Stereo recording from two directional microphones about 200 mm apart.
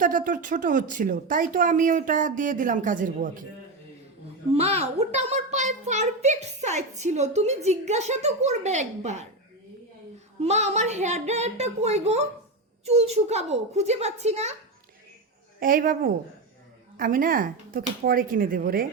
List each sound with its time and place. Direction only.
0.0 s a child's voice: 40° right (ahead or behind)
4.5 s a child's voice: 30° right (ahead or behind)
10.4 s a child's voice: 35° right (ahead or behind)
15.6 s speech: 45° right (ahead or behind)